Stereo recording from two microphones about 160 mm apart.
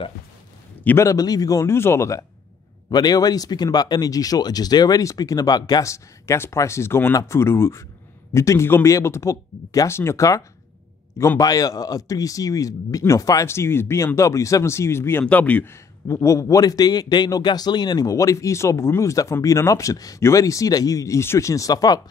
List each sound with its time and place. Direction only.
0.8 s speech: 20° left (ahead or behind)